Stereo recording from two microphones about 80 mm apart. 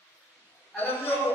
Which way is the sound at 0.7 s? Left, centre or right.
Left.